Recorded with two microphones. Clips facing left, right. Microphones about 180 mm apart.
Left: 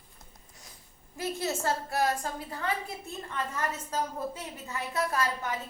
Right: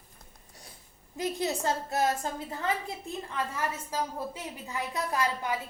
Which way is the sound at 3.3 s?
10° right (ahead or behind).